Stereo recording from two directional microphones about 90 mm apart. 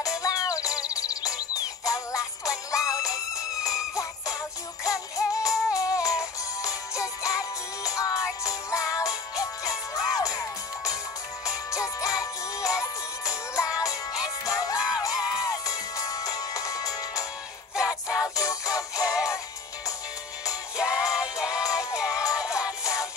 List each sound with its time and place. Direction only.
0.2 s music: 40° left (ahead or behind)
3.9 s jingle bell: 35° left (ahead or behind)
4.8 s music: 40° left (ahead or behind)
20.7 s music: 10° right (ahead or behind)
22.1 s music: 40° left (ahead or behind)